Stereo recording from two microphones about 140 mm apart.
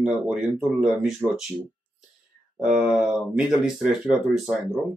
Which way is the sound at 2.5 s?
5° right (ahead or behind).